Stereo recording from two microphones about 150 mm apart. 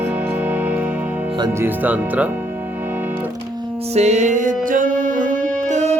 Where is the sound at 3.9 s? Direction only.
45° right (ahead or behind).